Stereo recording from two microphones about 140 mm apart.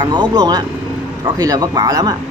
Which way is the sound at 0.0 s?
30° right (ahead or behind).